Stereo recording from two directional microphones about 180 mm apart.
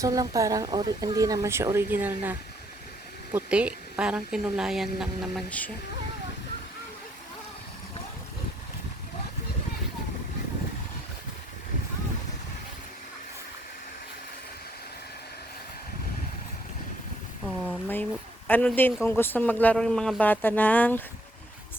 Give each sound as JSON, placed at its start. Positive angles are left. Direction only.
{"t": 0.0, "sound": "a woman's voice", "side_deg": -20}
{"t": 17.4, "sound": "a sound", "side_deg": 0}
{"t": 18.4, "sound": "speech", "side_deg": 10}